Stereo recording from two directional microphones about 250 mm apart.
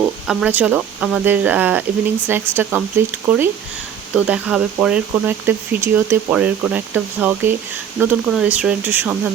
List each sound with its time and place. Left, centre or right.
0.0 s speech: centre